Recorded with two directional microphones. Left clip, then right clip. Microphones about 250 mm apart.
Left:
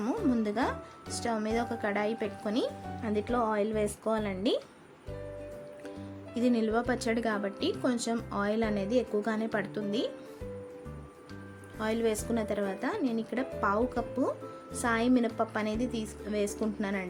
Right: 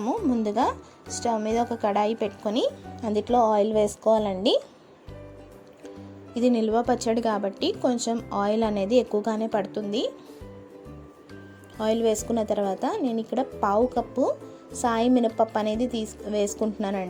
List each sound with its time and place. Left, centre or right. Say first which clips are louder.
0.3 s a woman's voice: right 6 dB; centre
6.3 s a woman's voice: right 6 dB; centre
11.8 s a woman's voice: right 7 dB; centre